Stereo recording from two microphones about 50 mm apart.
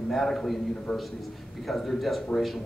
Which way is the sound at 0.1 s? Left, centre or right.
Centre.